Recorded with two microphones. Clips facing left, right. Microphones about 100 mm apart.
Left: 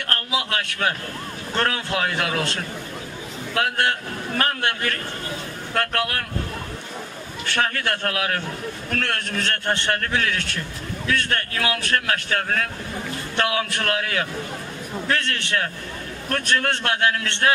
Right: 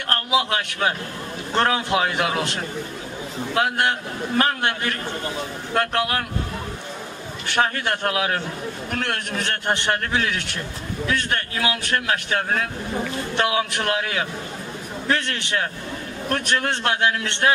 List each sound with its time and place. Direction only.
0.1 s a man's voice: 20° right (ahead or behind)
7.4 s a man's voice: 20° right (ahead or behind)